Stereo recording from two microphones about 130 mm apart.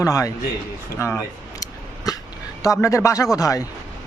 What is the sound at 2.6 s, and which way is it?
A man's voice, 25° left (ahead or behind).